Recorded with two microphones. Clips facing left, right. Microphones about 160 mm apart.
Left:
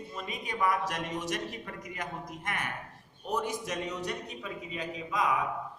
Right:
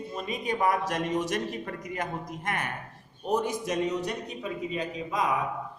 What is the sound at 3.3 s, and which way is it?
Speech, 20° right (ahead or behind).